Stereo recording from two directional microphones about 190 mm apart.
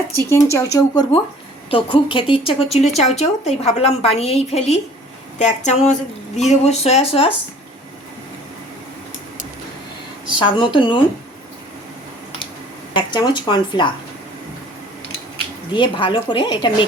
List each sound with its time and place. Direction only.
0.2 s a woman's voice: 15° left (ahead or behind)
10.2 s a woman's voice: 25° left (ahead or behind)
12.9 s a woman's voice: 25° left (ahead or behind)
15.7 s a woman's voice: 25° left (ahead or behind)